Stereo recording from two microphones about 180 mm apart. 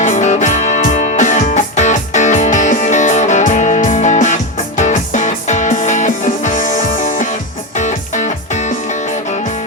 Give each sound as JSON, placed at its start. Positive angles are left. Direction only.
{"t": 0.0, "sound": "music", "side_deg": 45}